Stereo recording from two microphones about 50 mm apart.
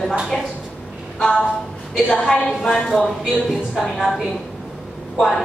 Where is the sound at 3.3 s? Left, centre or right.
Centre.